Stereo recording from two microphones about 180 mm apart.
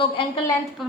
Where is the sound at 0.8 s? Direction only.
Centre (ahead or behind).